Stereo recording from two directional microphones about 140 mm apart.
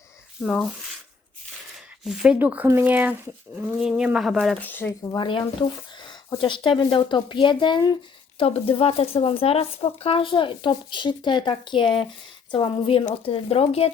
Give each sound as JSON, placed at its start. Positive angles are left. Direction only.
{"t": 0.4, "sound": "speech", "side_deg": 5}
{"t": 2.0, "sound": "speech", "side_deg": -5}
{"t": 4.6, "sound": "speech", "side_deg": 15}
{"t": 5.1, "sound": "speech", "side_deg": 35}
{"t": 8.4, "sound": "speech", "side_deg": 45}